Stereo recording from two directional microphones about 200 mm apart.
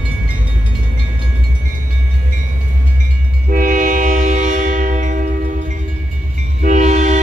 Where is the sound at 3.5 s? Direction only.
40° right (ahead or behind).